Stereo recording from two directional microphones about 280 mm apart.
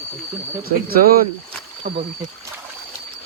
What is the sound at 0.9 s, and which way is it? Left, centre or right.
Speech, right.